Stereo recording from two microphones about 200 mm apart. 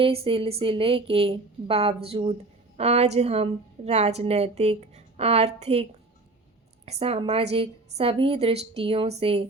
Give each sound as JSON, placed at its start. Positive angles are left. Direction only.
{"t": 0.0, "sound": "a woman's voice", "side_deg": -30}
{"t": 6.8, "sound": "a woman's voice", "side_deg": -30}